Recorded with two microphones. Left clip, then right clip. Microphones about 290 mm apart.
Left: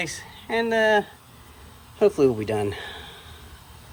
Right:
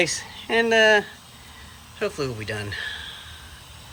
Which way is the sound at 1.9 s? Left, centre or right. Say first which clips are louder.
Left 8 dB; centre.